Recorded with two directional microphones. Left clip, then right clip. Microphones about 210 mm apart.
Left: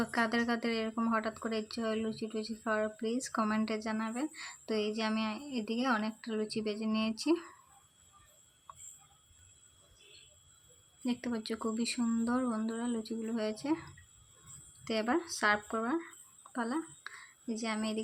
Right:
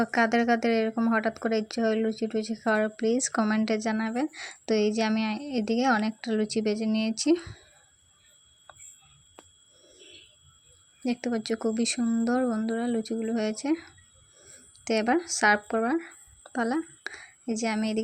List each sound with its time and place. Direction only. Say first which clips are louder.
0.0 s speech: right 8 dB; 25° right (ahead or behind)
8.7 s a sound: right 2 dB; 20° right (ahead or behind)
11.0 s speech: right 7 dB; 25° right (ahead or behind)